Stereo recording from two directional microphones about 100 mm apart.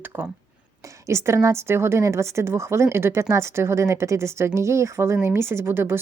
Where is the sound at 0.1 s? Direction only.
20° right (ahead or behind).